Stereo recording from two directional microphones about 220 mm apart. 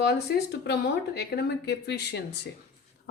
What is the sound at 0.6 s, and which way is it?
A woman's voice, 50° left (ahead or behind).